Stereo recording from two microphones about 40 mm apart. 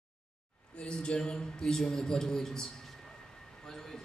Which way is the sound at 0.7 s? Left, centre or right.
Left.